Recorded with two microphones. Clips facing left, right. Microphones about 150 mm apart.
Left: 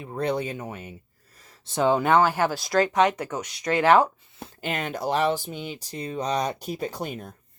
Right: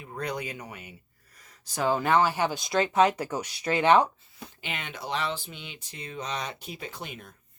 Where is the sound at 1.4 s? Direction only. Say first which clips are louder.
Left 6 dB; 25° left (ahead or behind).